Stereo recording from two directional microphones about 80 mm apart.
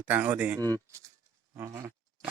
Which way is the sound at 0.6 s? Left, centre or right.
Right.